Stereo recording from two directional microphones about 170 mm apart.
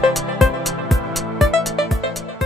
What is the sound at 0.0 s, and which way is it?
Music, centre (ahead or behind).